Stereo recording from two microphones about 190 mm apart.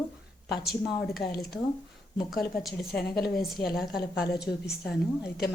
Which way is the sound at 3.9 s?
55° left (ahead or behind).